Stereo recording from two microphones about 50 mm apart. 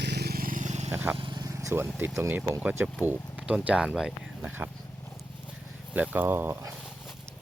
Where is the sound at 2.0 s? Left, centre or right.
Right.